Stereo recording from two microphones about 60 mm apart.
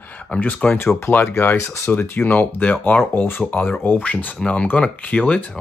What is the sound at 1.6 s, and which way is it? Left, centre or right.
Speech, left.